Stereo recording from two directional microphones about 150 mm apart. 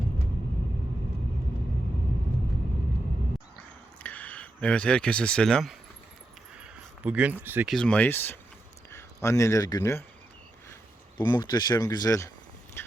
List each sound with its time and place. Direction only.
4.0 s speech: 10° left (ahead or behind)
6.6 s a sound: 10° right (ahead or behind)
7.4 s speech: 15° right (ahead or behind)
7.7 s speech: 5° left (ahead or behind); by 10.0 s 25° left (ahead or behind)
11.2 s speech: 30° left (ahead or behind)
12.8 s a sound: 15° left (ahead or behind)